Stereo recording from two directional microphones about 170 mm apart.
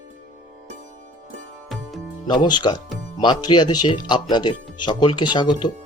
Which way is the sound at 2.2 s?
25° left (ahead or behind).